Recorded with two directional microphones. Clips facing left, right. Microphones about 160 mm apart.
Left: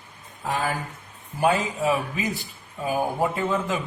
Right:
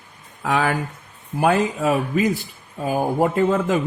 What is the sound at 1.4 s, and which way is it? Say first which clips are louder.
Speech: right 4 dB; 60° right (ahead or behind).